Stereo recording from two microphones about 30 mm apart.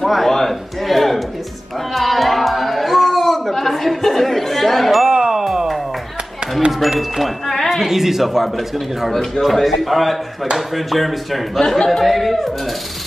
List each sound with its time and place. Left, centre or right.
0.0 s a sound: centre
5.0 s music: right
5.4 s a sound: centre
7.0 s music: centre
7.7 s a man's voice: centre
9.1 s speech: centre
9.4 s a man's voice: centre